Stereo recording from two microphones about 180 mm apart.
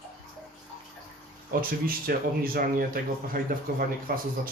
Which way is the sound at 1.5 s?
55° right (ahead or behind).